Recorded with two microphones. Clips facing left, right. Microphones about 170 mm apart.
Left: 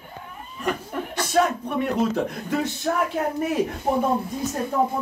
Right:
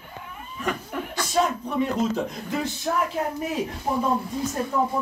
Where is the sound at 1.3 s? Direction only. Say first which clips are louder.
Left 2 dB; 60° left (ahead or behind).